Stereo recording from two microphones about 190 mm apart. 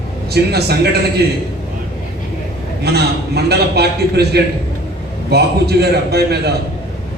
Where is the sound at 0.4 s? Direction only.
60° right (ahead or behind).